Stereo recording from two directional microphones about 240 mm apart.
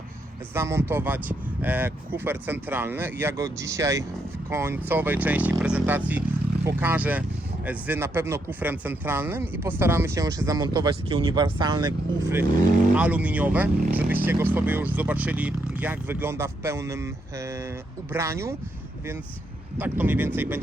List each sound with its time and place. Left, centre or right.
0.5 s speech: centre
19.8 s speech: centre